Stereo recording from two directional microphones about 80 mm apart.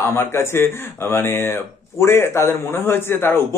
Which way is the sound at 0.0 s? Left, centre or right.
Left.